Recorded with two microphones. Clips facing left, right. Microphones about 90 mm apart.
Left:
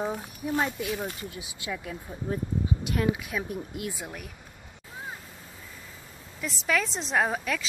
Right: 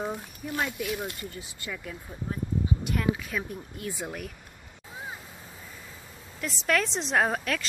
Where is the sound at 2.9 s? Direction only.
10° left (ahead or behind).